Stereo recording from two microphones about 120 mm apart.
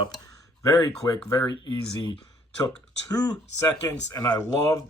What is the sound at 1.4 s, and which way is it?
Speech, 40° left (ahead or behind).